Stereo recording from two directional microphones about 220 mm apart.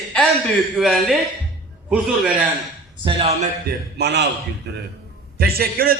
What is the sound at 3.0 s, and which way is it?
Speech, 25° right (ahead or behind).